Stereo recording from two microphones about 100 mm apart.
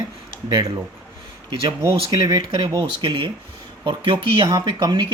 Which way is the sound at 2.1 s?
45° right (ahead or behind).